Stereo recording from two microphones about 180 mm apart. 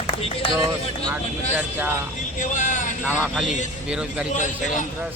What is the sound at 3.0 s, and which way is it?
A man's voice, 5° right (ahead or behind).